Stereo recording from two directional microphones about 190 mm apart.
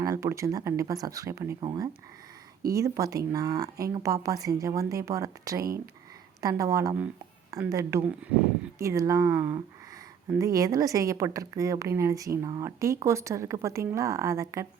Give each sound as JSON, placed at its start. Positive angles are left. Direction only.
{"t": 0.0, "sound": "speech", "side_deg": -15}